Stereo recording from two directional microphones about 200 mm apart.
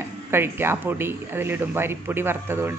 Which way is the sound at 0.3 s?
10° right (ahead or behind).